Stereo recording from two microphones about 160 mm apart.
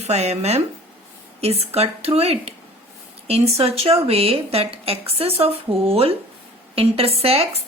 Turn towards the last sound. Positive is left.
turn(degrees=-40)  # may be behind; listen again after turning